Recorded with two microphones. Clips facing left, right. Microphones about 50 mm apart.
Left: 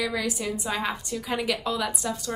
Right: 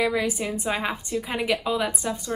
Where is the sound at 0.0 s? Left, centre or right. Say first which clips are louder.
Right 4 dB; right.